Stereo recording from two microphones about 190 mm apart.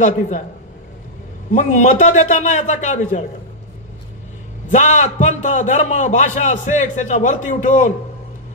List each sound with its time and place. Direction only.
1.5 s a man's voice: 40° left (ahead or behind)
4.6 s a man's voice: 40° left (ahead or behind)